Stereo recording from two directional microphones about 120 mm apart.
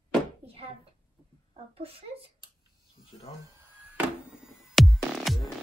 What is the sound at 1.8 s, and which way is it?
Speech, 55° right (ahead or behind).